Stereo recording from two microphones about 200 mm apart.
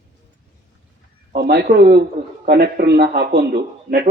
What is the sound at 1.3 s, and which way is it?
Speech, 50° right (ahead or behind).